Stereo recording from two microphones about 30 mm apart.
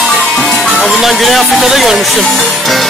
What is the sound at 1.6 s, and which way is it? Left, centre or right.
Speech, centre.